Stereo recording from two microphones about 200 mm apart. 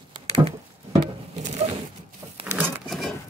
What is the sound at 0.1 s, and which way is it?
Patter, 30° right (ahead or behind).